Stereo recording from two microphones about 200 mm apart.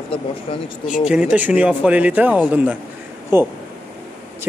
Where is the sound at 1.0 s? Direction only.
5° right (ahead or behind).